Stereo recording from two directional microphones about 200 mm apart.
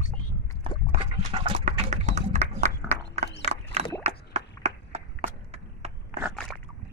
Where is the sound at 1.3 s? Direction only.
35° right (ahead or behind).